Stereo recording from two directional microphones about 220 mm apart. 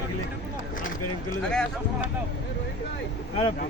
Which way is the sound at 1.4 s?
5° left (ahead or behind).